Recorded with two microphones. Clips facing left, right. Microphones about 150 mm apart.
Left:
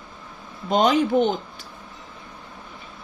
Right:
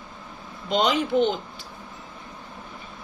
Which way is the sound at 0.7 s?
45° left (ahead or behind).